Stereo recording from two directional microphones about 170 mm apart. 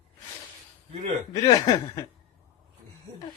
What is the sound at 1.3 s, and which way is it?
Speech, 20° left (ahead or behind).